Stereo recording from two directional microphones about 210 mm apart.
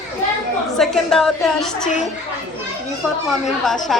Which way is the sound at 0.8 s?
Centre (ahead or behind).